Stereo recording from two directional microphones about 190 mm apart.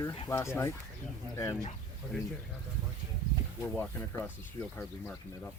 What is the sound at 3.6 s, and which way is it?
Speech, 10° left (ahead or behind).